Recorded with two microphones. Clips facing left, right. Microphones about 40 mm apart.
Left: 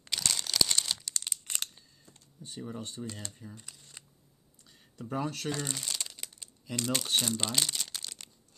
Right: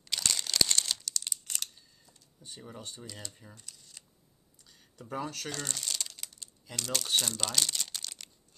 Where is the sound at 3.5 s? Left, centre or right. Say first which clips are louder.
Left 3 dB; left.